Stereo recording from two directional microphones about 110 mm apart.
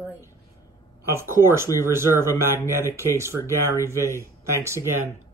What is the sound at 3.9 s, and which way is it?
Speech, 25° right (ahead or behind).